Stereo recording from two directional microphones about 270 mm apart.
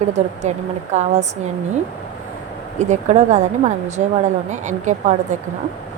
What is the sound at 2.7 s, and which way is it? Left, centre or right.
Speech, right.